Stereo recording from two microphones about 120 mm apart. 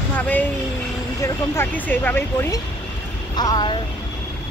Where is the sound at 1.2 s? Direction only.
15° left (ahead or behind).